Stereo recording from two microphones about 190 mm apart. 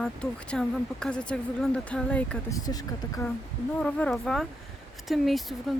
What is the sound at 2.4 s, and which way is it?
Speech, 20° left (ahead or behind).